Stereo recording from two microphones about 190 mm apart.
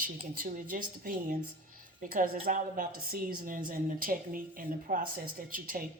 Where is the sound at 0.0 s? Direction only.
45° right (ahead or behind).